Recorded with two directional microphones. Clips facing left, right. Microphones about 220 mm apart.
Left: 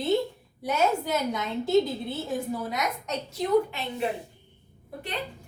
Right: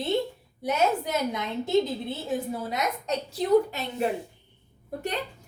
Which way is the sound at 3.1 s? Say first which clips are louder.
Right 3 dB; 35° right (ahead or behind).